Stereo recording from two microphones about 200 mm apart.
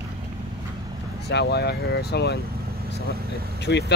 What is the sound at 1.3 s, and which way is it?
Speech, 55° left (ahead or behind).